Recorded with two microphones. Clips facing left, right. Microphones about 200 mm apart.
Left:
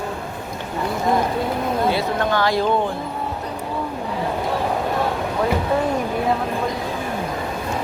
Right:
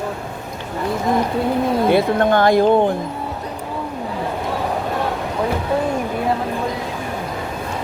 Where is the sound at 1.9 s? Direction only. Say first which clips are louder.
Right 6 dB; 50° right (ahead or behind).